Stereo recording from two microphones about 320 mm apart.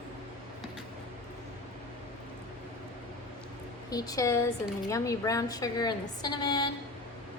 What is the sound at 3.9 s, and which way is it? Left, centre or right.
A woman's voice, centre.